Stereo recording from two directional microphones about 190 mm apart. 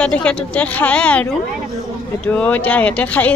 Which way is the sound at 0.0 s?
5° left (ahead or behind).